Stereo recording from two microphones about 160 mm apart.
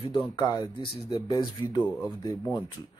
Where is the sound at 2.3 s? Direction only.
Centre (ahead or behind).